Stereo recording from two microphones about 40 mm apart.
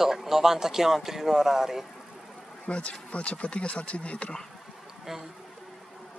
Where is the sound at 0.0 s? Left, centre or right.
Centre.